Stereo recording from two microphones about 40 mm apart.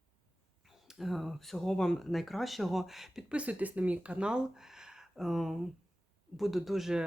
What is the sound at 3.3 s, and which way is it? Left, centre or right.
Speech, right.